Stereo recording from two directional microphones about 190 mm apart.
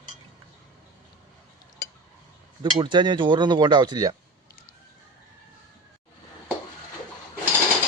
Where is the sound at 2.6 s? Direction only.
25° right (ahead or behind).